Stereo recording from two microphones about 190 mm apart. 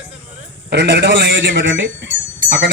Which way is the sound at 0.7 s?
65° right (ahead or behind).